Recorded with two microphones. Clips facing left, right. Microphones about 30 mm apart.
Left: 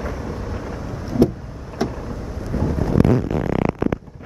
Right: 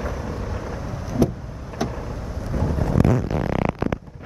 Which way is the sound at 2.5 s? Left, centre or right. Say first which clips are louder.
Left 3 dB; left.